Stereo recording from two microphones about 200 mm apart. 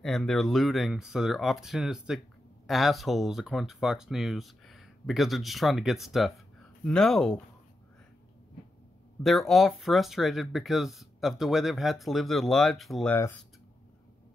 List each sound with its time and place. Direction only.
0.0 s speech: centre (ahead or behind)
9.2 s speech: centre (ahead or behind)